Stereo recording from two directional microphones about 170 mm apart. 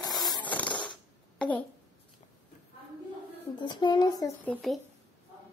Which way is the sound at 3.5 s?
25° left (ahead or behind).